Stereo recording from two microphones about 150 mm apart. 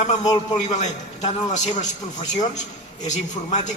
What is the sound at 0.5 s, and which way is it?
A man's voice, 50° left (ahead or behind).